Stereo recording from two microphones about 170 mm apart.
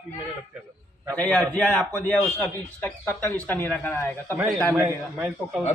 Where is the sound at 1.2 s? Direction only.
5° left (ahead or behind).